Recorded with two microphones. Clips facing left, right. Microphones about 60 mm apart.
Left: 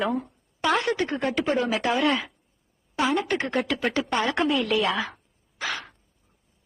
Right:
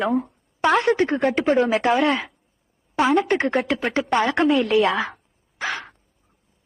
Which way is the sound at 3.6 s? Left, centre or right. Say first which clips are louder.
Right 4 dB; right.